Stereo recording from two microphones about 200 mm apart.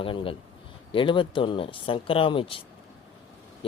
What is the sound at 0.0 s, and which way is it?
Speech, 25° left (ahead or behind).